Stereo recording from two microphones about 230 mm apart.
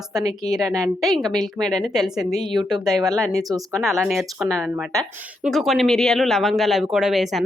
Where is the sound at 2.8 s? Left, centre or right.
Centre.